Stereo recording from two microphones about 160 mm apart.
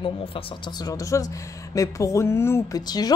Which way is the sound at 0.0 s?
35° left (ahead or behind).